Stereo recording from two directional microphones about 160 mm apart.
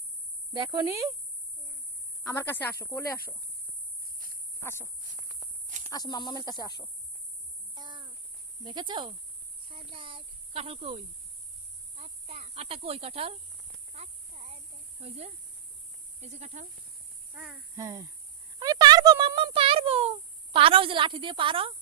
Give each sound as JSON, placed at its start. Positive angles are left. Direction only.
{"t": 0.5, "sound": "speech", "side_deg": -30}
{"t": 0.9, "sound": "speech", "side_deg": -20}
{"t": 2.3, "sound": "speech", "side_deg": 10}
{"t": 4.0, "sound": "cricket", "side_deg": -65}
{"t": 5.9, "sound": "speech", "side_deg": 25}
{"t": 7.8, "sound": "a sound", "side_deg": -30}
{"t": 8.6, "sound": "speech", "side_deg": -30}
{"t": 13.9, "sound": "a sound", "side_deg": -40}
{"t": 15.0, "sound": "speech", "side_deg": -40}
{"t": 17.3, "sound": "speech", "side_deg": 0}
{"t": 17.7, "sound": "speech", "side_deg": -20}
{"t": 18.6, "sound": "a sound", "side_deg": -25}